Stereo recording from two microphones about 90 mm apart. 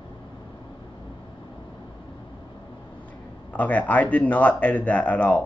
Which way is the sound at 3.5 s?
15° left (ahead or behind).